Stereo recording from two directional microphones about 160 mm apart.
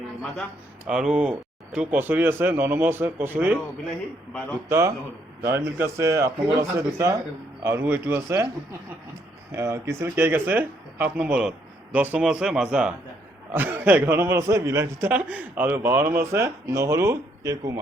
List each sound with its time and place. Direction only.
0.9 s a man's voice: 5° right (ahead or behind)
4.7 s a man's voice: 20° right (ahead or behind)
9.5 s a man's voice: 20° right (ahead or behind)